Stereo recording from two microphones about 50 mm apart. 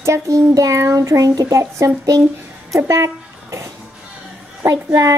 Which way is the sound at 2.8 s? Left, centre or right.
Right.